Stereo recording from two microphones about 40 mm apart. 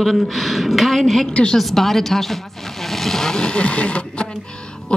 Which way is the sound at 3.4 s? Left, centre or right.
Left.